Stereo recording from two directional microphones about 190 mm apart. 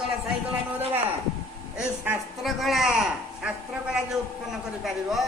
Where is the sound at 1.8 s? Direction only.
Centre (ahead or behind).